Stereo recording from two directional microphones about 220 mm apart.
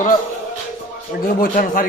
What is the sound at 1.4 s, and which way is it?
Speech, 40° left (ahead or behind).